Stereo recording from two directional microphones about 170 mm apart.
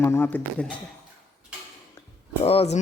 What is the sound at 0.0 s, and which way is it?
Speech, 15° left (ahead or behind).